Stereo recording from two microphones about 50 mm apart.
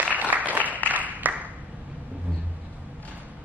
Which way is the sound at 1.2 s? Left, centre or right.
Right.